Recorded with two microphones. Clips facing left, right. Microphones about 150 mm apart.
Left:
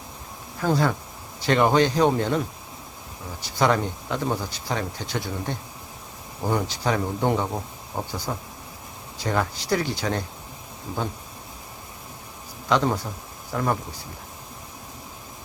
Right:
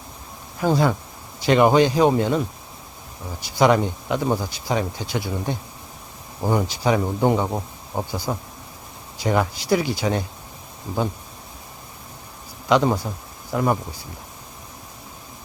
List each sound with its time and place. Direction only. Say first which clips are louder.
0.6 s speech: right 3 dB; 15° right (ahead or behind)
3.4 s speech: right 4 dB; 15° right (ahead or behind)
12.6 s speech: right 4 dB; 15° right (ahead or behind)